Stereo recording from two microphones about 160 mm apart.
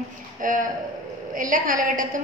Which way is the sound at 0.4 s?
55° right (ahead or behind).